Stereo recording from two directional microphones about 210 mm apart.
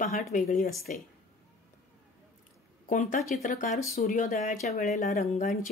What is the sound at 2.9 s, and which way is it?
Speech, 40° left (ahead or behind).